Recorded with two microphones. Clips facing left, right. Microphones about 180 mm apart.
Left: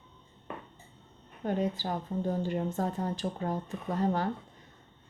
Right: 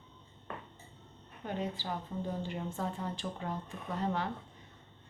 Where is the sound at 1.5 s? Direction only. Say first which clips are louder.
Left 6 dB; 45° left (ahead or behind).